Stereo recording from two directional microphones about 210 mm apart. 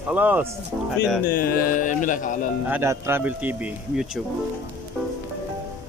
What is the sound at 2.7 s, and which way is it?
Speech, 10° right (ahead or behind).